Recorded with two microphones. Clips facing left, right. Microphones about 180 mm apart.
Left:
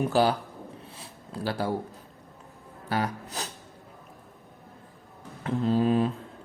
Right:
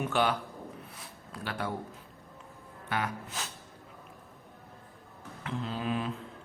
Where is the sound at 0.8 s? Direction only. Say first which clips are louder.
Left 2 dB; 30° left (ahead or behind).